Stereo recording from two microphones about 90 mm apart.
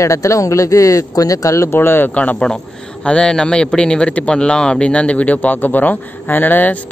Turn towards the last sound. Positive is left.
turn(degrees=20)  # may be behind; listen again after turning